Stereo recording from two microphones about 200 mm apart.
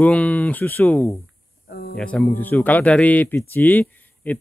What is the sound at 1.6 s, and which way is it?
Speech, 50° left (ahead or behind).